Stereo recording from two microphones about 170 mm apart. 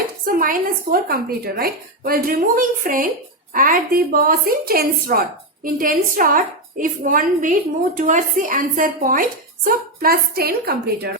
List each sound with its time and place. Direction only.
0.3 s speech: 55° right (ahead or behind)